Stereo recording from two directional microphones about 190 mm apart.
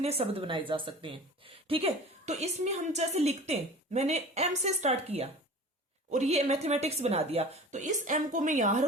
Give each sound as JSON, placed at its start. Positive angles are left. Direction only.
{"t": 0.0, "sound": "a woman's voice", "side_deg": -30}